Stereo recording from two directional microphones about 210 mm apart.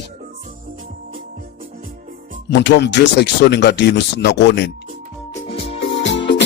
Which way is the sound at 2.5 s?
55° left (ahead or behind).